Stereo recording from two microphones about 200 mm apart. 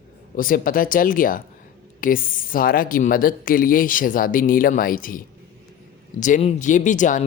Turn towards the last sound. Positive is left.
turn(degrees=40)  # may be behind; listen again after turning